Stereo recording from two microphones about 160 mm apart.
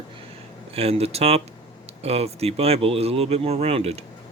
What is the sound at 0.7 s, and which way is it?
Speech, 40° right (ahead or behind).